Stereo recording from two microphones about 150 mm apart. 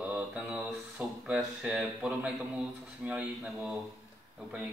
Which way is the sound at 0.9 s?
10° right (ahead or behind).